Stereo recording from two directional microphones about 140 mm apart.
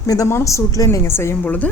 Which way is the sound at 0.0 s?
25° left (ahead or behind).